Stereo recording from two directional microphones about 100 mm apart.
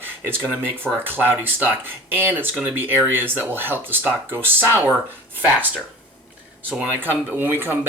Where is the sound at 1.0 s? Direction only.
20° right (ahead or behind).